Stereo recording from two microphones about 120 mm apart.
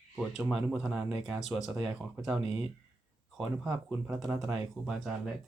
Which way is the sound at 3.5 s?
5° right (ahead or behind).